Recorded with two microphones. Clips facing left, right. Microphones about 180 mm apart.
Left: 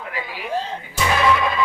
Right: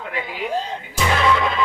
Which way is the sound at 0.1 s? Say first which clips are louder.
Right 3 dB; 25° right (ahead or behind).